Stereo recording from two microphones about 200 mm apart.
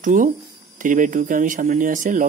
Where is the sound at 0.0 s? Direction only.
40° right (ahead or behind).